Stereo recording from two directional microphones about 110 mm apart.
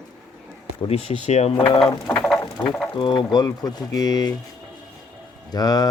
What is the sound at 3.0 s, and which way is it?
Speech, 45° left (ahead or behind).